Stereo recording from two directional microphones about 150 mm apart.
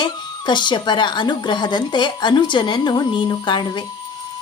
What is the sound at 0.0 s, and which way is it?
A woman's voice, 30° left (ahead or behind).